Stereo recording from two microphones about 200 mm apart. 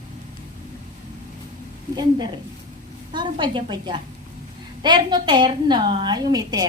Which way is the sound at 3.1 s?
25° right (ahead or behind).